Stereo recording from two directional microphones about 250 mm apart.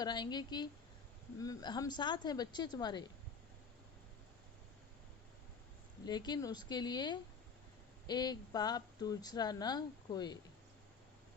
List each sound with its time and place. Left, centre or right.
0.0 s speech: centre
6.1 s speech: centre